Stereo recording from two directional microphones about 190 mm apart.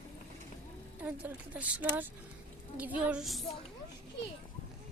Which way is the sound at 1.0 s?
10° right (ahead or behind).